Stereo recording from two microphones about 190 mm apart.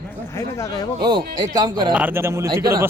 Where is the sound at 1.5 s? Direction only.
20° right (ahead or behind).